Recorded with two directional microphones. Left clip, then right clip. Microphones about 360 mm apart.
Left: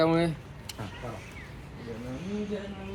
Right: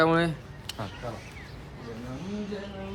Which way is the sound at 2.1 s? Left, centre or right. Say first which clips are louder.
Left 2 dB; centre.